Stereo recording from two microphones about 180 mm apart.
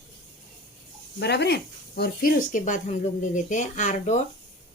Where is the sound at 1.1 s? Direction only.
65° left (ahead or behind); by 4.2 s 40° left (ahead or behind).